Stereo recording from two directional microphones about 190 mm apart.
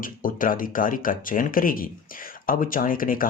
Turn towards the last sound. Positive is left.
turn(degrees=50)  # may be behind; listen again after turning